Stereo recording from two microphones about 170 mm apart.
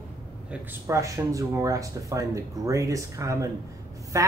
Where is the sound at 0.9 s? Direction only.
20° right (ahead or behind).